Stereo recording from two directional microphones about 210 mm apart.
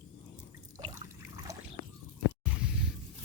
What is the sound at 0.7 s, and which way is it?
Trickle, 20° right (ahead or behind).